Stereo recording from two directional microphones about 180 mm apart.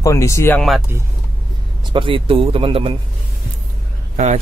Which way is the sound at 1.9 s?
30° right (ahead or behind).